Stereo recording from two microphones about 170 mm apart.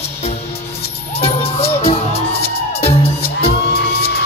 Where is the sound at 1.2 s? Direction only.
35° left (ahead or behind).